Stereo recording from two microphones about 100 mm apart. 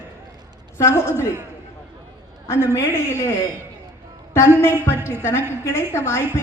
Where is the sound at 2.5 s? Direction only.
25° left (ahead or behind).